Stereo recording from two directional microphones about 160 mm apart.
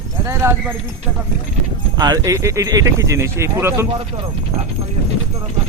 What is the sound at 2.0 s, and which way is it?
Speech, 20° right (ahead or behind).